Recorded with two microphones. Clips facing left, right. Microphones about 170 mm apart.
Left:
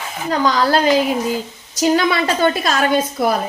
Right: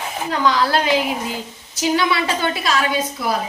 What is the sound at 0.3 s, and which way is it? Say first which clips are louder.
A woman's voice: left 3 dB; 45° left (ahead or behind).